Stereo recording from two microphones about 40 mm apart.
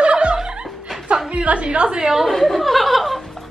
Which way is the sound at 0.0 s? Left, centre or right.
Right.